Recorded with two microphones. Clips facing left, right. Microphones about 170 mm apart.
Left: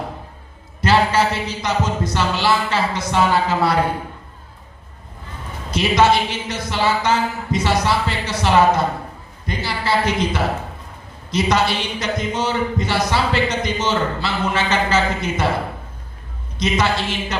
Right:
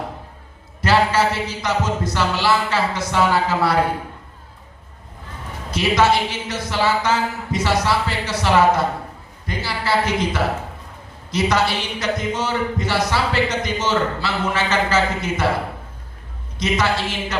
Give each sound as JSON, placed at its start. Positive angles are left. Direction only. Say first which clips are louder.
{"t": 0.8, "sound": "speech", "louder": "left 1 dB", "side_deg": 20}
{"t": 5.7, "sound": "speech", "louder": "left 1 dB", "side_deg": 20}
{"t": 16.6, "sound": "speech", "louder": "left 1 dB", "side_deg": 20}